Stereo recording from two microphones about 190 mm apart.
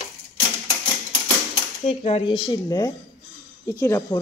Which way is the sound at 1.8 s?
35° left (ahead or behind).